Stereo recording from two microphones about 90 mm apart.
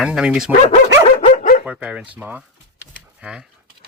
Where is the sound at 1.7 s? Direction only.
15° right (ahead or behind).